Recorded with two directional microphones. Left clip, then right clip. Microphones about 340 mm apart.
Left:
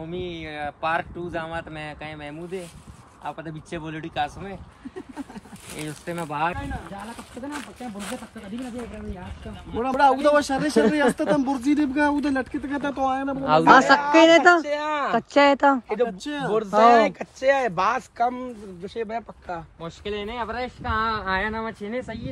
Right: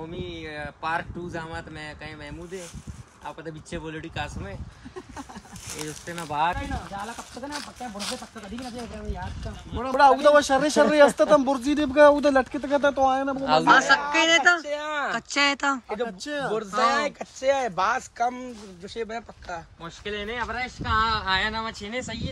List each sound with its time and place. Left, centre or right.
0.1 s speech: centre
5.8 s speech: centre
9.8 s speech: centre
13.4 s speech: centre
13.7 s a man's voice: left
14.1 s speech: centre
14.7 s speech: left
15.1 s speech: centre
16.9 s speech: left
19.8 s speech: centre